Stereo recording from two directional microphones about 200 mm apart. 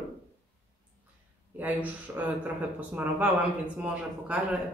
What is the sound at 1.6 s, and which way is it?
Speech, 10° right (ahead or behind).